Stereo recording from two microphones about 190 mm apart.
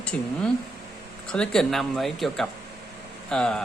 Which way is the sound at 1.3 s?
5° left (ahead or behind).